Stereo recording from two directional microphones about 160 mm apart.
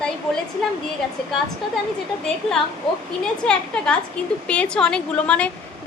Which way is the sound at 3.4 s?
5° left (ahead or behind).